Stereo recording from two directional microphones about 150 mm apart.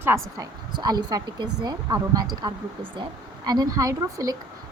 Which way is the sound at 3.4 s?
25° right (ahead or behind).